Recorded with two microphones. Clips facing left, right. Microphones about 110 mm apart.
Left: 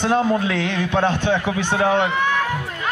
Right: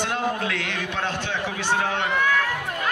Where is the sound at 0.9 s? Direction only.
55° left (ahead or behind).